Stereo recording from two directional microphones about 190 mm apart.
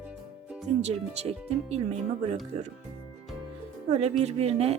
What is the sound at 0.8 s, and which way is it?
Speech, 35° right (ahead or behind).